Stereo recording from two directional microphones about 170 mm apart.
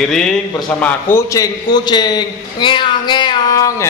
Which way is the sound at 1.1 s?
20° left (ahead or behind).